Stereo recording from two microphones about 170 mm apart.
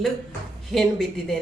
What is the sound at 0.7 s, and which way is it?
Speech, centre (ahead or behind).